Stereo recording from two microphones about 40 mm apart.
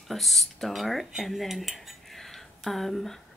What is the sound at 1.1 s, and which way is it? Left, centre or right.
Cutlery, centre.